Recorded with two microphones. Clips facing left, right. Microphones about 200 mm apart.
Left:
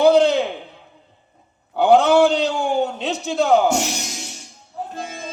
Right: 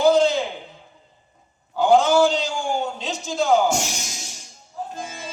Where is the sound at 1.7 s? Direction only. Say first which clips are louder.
Left 3 dB; 60° left (ahead or behind).